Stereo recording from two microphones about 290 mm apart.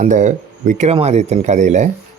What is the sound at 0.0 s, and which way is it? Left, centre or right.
Speech, right.